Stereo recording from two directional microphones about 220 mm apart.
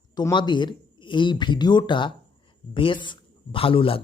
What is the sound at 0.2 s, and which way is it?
Speech, 20° left (ahead or behind).